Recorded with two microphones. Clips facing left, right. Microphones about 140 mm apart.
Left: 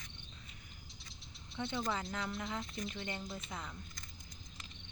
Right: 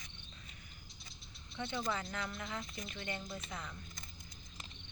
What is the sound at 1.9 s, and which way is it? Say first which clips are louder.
Speech: left 2 dB; 20° left (ahead or behind).